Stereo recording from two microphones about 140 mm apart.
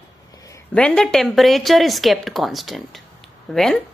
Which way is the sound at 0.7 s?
5° left (ahead or behind).